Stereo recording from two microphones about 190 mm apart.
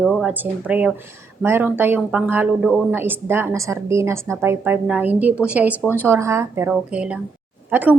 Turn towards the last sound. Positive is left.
turn(degrees=-10)  # may be behind; listen again after turning